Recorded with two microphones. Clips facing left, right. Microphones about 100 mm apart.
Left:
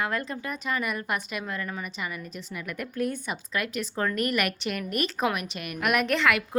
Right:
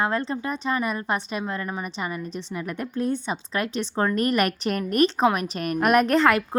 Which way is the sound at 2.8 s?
25° right (ahead or behind).